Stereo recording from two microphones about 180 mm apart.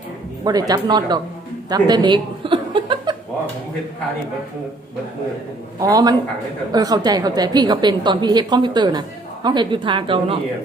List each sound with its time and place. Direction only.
0.7 s a woman's voice: 25° right (ahead or behind)
5.8 s a woman's voice: 20° right (ahead or behind)